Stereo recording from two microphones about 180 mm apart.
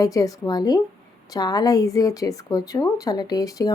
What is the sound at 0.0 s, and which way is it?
Speech, 20° left (ahead or behind).